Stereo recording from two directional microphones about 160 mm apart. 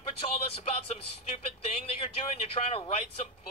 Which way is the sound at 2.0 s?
40° left (ahead or behind).